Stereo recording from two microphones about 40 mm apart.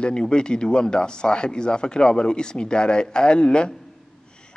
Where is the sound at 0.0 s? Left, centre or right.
Left.